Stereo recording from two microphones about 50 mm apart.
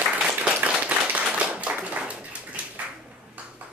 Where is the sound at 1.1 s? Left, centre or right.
Right.